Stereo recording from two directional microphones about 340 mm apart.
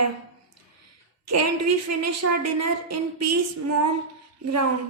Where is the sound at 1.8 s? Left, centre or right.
Right.